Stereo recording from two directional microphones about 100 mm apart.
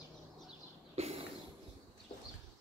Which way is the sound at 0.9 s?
90° right.